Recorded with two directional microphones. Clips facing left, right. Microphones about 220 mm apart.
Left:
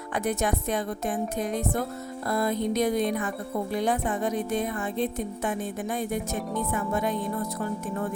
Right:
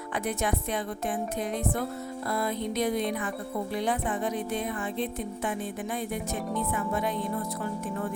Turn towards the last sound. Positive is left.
turn(degrees=45)  # may be behind; listen again after turning